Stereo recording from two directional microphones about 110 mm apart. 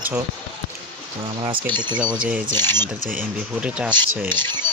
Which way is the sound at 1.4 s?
45° right (ahead or behind).